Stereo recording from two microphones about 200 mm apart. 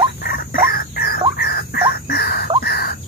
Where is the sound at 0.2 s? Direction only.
45° left (ahead or behind).